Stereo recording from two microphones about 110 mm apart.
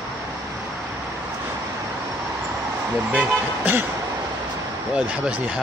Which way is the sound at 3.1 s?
15° right (ahead or behind).